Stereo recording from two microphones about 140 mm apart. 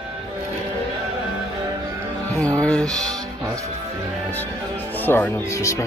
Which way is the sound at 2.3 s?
10° left (ahead or behind).